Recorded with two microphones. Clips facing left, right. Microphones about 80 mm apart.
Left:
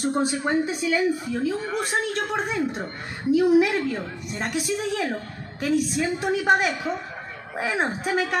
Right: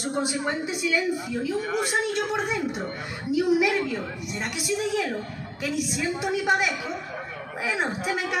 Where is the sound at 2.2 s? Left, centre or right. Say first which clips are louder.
Left 1 dB; left.